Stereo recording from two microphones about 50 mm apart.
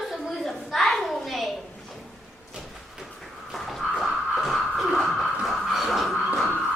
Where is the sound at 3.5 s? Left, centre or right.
Centre.